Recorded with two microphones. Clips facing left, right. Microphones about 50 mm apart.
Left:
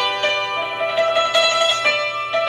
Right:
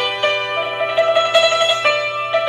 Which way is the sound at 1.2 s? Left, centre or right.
Centre.